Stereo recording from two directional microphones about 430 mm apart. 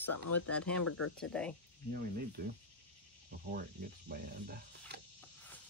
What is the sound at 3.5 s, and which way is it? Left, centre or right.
Speech, right.